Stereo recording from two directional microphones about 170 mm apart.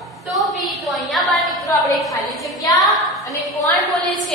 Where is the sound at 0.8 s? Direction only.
Centre (ahead or behind).